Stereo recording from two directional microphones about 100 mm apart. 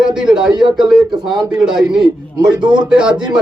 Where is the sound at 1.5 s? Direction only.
5° right (ahead or behind).